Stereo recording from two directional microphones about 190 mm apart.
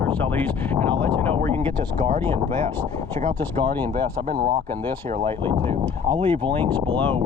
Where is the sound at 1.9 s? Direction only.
40° right (ahead or behind).